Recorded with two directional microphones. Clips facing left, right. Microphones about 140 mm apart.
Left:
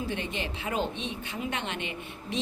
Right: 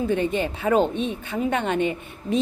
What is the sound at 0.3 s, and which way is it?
Speech, 45° right (ahead or behind).